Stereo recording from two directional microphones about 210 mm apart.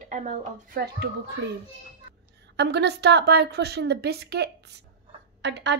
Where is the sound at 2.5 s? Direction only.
55° right (ahead or behind).